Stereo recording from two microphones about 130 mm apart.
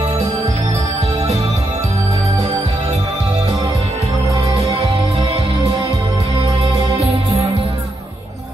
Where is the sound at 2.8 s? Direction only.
50° right (ahead or behind).